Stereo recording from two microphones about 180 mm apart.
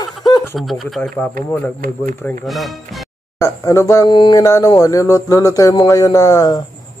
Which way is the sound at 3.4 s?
20° left (ahead or behind).